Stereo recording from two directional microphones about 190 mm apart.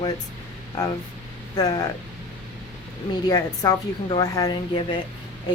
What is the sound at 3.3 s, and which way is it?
Speech, 25° left (ahead or behind).